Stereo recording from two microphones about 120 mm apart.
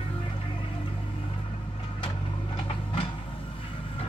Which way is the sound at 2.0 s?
50° left (ahead or behind).